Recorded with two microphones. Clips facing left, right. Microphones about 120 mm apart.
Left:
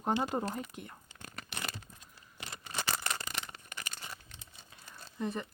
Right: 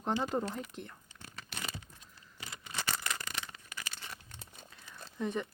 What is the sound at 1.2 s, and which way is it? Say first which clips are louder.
Crumpling: left 2 dB; 55° left (ahead or behind).